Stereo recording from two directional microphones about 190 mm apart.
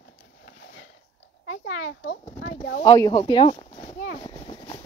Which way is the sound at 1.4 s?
55° left (ahead or behind).